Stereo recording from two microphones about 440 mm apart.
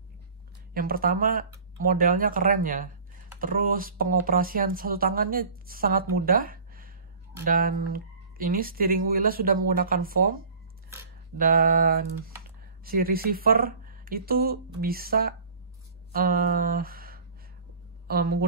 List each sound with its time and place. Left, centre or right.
0.7 s speech: centre
16.1 s a sound: centre
18.0 s speech: right